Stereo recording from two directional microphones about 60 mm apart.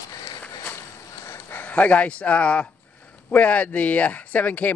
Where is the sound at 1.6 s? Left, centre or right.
Left.